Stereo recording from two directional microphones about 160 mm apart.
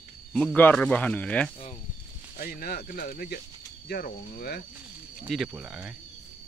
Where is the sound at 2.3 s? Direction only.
65° left (ahead or behind).